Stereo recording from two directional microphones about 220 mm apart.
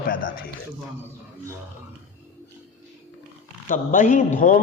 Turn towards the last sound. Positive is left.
turn(degrees=35)  # may be behind; listen again after turning